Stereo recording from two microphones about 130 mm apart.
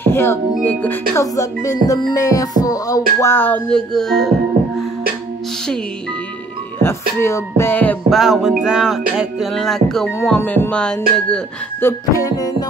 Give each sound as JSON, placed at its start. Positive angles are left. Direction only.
{"t": 0.0, "sound": "music", "side_deg": 20}
{"t": 3.7, "sound": "music", "side_deg": 5}
{"t": 4.6, "sound": "music", "side_deg": -90}
{"t": 6.8, "sound": "music", "side_deg": 20}
{"t": 8.1, "sound": "music", "side_deg": 0}
{"t": 11.8, "sound": "music", "side_deg": 25}